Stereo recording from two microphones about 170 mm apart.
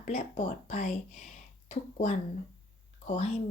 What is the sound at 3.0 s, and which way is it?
Speech, 40° left (ahead or behind).